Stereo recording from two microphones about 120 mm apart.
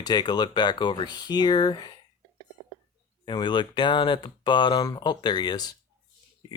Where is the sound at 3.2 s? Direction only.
40° left (ahead or behind).